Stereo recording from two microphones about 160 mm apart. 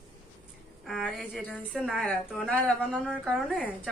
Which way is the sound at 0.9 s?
Centre (ahead or behind).